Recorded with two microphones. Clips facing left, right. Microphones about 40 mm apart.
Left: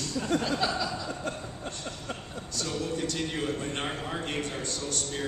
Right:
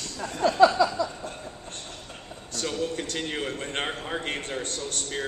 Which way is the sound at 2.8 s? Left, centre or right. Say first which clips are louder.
Even; right.